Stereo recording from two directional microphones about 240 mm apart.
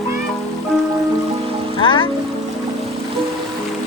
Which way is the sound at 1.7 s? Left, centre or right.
Centre.